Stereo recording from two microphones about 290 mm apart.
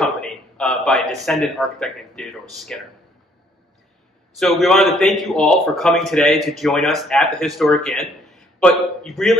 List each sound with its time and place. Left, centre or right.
0.0 s a sound: centre
1.2 s a man's voice: centre
4.4 s a man's voice: centre